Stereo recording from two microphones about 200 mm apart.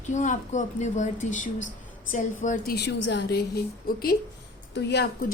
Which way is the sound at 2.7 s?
55° left (ahead or behind).